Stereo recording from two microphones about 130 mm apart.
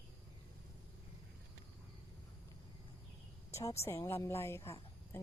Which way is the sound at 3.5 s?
20° left (ahead or behind).